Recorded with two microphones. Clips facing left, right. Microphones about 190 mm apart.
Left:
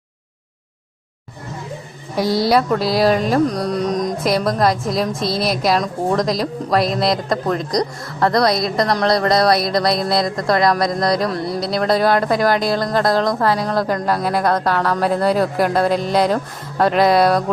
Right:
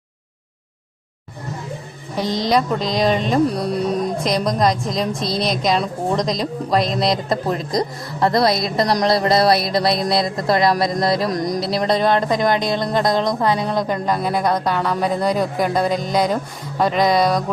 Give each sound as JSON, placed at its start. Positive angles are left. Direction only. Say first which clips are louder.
{"t": 2.1, "sound": "speech", "louder": "left 3 dB", "side_deg": 10}
{"t": 3.4, "sound": "music", "louder": "even", "side_deg": -5}
{"t": 4.2, "sound": "speech", "louder": "left 2 dB", "side_deg": 5}
{"t": 7.8, "sound": "a woman's voice", "louder": "left 1 dB", "side_deg": -25}
{"t": 8.4, "sound": "speech", "louder": "left 1 dB", "side_deg": 0}
{"t": 11.3, "sound": "music", "louder": "right 1 dB", "side_deg": -15}
{"t": 11.6, "sound": "speech", "louder": "left 3 dB", "side_deg": 0}